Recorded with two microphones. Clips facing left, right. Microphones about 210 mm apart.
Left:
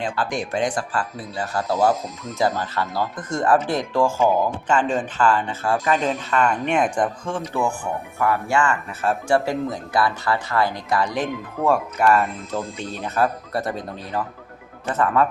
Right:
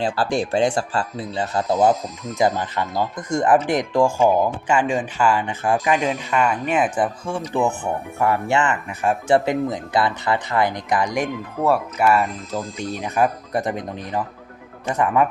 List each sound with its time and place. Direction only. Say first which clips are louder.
0.0 s speech: right 4 dB; 30° right (ahead or behind); by 7.4 s 5° right (ahead or behind)
8.2 s speech: right 1 dB; 25° right (ahead or behind)